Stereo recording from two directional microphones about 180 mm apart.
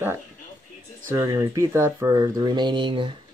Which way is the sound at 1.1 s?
15° right (ahead or behind).